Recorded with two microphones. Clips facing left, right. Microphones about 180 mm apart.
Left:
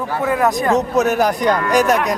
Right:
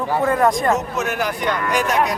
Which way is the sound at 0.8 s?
40° left (ahead or behind).